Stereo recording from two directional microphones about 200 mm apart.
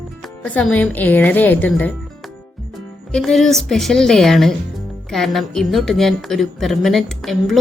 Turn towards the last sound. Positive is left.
turn(degrees=0)  # may be behind; listen again after turning